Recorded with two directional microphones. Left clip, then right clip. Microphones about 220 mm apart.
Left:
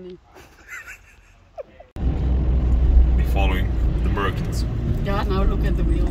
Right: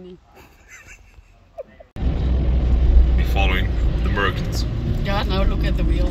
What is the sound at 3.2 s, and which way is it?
Vehicle, 10° left (ahead or behind).